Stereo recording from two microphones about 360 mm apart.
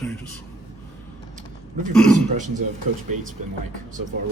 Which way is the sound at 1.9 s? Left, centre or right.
Centre.